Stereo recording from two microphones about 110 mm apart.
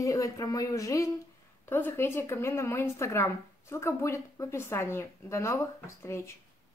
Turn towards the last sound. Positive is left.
turn(degrees=25)  # may be behind; listen again after turning